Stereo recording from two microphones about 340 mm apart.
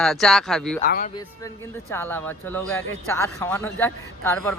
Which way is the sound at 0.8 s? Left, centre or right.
Left.